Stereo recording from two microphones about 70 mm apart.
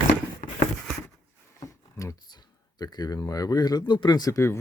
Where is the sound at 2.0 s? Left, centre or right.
Left.